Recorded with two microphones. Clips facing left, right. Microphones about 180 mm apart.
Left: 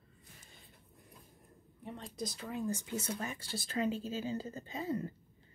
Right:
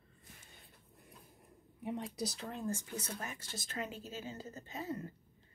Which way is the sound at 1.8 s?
10° right (ahead or behind).